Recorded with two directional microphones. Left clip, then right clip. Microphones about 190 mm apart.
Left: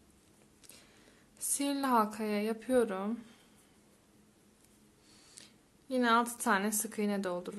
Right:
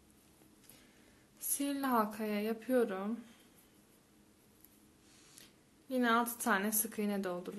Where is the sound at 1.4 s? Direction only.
15° left (ahead or behind).